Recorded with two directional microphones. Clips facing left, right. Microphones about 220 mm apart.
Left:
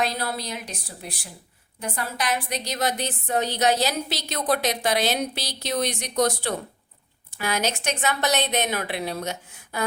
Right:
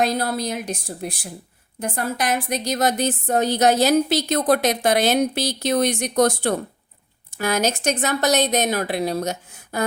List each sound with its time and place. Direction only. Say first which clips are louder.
0.0 s a woman's voice: right 6 dB; 45° right (ahead or behind)